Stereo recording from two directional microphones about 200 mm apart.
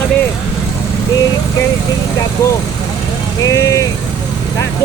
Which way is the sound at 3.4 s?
15° left (ahead or behind).